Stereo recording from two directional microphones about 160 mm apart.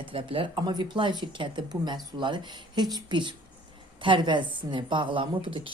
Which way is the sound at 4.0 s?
30° right (ahead or behind).